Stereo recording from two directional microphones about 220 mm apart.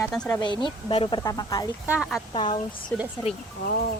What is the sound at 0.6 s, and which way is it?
Speech, 20° left (ahead or behind).